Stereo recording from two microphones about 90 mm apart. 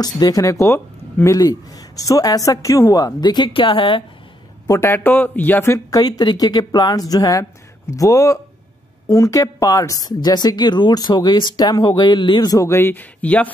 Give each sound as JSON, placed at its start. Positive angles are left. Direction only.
{"t": 0.0, "sound": "a woman's voice", "side_deg": 45}
{"t": 4.6, "sound": "speech", "side_deg": 30}
{"t": 5.9, "sound": "a woman's voice", "side_deg": 45}
{"t": 12.0, "sound": "a man's voice", "side_deg": 60}
{"t": 12.6, "sound": "speech", "side_deg": 25}